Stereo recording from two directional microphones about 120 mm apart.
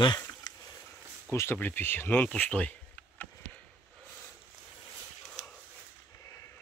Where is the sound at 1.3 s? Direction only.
20° left (ahead or behind).